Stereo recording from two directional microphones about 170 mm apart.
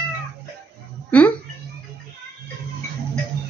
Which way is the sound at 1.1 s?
10° left (ahead or behind).